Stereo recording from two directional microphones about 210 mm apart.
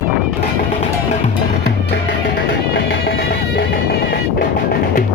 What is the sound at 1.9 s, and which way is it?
Music, 55° left (ahead or behind).